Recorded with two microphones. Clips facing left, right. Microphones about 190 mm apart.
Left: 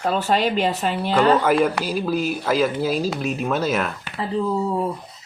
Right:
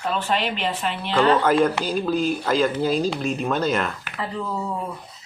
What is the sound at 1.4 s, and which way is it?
Speech, 10° left (ahead or behind).